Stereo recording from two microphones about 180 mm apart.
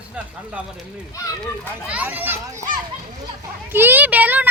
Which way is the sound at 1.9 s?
10° right (ahead or behind).